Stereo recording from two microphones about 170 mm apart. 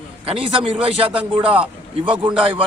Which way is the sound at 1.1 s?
5° right (ahead or behind).